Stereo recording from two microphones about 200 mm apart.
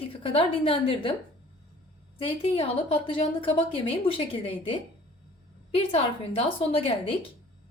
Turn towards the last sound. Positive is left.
turn(degrees=30)  # may be behind; listen again after turning